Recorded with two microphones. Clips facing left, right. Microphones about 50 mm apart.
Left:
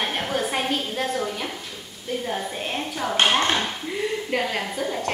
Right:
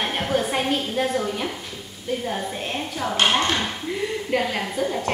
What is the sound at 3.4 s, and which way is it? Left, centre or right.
Dishes, centre.